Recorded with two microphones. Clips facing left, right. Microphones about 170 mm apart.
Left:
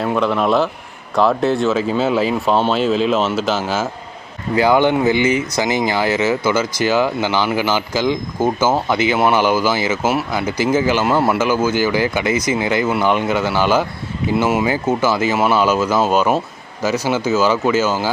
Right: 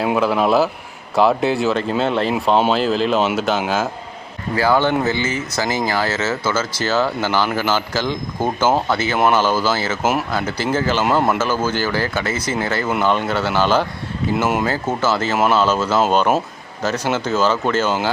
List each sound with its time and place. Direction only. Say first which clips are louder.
0.2 s speech: even; 5° right (ahead or behind)
4.5 s speech: left 3 dB; 20° left (ahead or behind); by 14.7 s centre (ahead or behind)
14.7 s speech: left 3 dB; 10° left (ahead or behind)